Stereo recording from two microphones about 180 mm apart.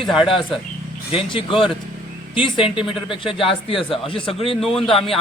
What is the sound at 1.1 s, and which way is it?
Speech, 30° left (ahead or behind).